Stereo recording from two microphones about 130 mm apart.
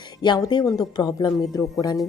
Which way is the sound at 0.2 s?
30° left (ahead or behind).